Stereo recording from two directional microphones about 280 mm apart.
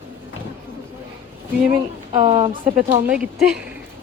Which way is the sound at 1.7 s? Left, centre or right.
Right.